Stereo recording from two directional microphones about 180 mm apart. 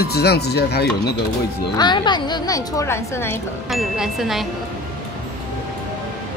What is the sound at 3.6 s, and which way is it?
Speech, centre (ahead or behind).